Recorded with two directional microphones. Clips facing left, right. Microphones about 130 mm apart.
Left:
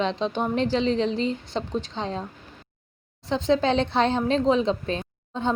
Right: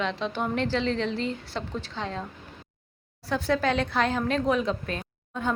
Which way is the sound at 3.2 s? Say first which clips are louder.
Left 3 dB; 20° left (ahead or behind).